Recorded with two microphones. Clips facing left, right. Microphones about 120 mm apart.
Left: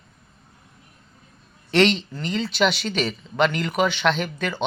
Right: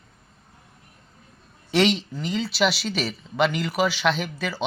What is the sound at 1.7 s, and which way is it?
Speech, 5° right (ahead or behind).